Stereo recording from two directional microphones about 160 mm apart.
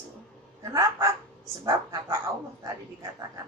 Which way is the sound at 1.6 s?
20° right (ahead or behind).